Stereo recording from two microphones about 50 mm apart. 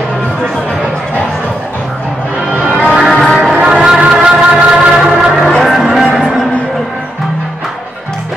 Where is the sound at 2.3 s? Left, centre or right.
Right; by 6.0 s centre.